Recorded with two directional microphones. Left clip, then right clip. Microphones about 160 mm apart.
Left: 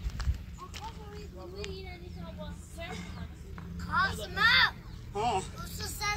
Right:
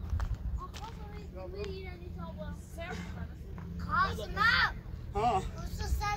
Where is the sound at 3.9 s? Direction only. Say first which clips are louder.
Left 1 dB; 90° right.